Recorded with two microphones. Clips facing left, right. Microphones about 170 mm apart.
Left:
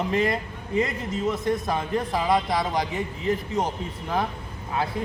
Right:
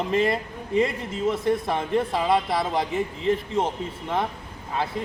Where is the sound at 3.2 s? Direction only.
25° right (ahead or behind).